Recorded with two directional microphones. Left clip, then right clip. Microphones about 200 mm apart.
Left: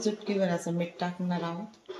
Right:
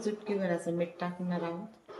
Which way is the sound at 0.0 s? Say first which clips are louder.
Left 4 dB; 50° left (ahead or behind).